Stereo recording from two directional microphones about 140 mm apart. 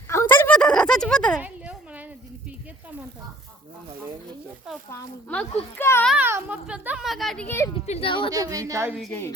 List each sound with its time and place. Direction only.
0.1 s a sound: 20° left (ahead or behind)
1.4 s a sound: 10° right (ahead or behind)
5.7 s a child's voice: 15° left (ahead or behind)
6.1 s speech: 15° right (ahead or behind)
7.4 s a child's voice: 20° left (ahead or behind)
7.9 s speech: 45° left (ahead or behind)
8.3 s a woman's voice: 25° right (ahead or behind)